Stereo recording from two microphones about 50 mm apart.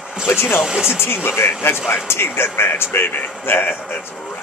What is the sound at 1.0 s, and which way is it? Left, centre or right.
Speech, left.